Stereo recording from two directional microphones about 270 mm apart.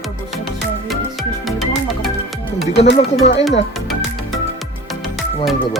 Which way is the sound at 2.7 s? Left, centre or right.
Left.